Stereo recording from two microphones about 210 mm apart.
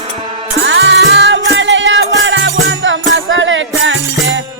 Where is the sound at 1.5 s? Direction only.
60° right (ahead or behind).